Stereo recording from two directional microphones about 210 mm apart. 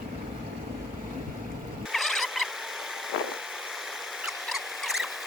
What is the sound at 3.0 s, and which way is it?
Vehicle, centre (ahead or behind).